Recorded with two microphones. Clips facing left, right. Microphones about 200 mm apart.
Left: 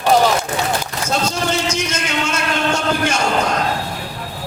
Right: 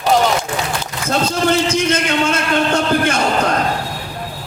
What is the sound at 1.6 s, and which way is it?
A man's voice, 55° right (ahead or behind).